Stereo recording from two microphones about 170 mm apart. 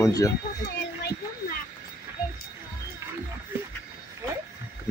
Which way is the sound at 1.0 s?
65° left (ahead or behind).